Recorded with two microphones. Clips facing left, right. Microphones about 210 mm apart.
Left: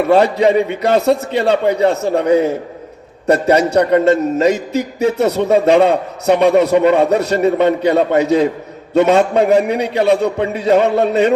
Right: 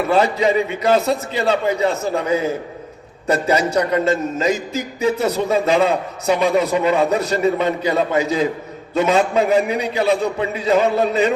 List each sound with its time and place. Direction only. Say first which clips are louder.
0.1 s a man's voice: left 5 dB; 65° left (ahead or behind)
7.3 s a man's voice: left 6 dB; 55° left (ahead or behind)